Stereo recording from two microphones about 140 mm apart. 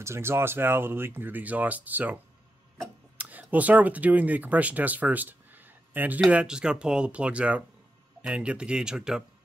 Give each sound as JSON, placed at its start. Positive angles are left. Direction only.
{"t": 0.0, "sound": "speech", "side_deg": -20}
{"t": 3.2, "sound": "speech", "side_deg": -10}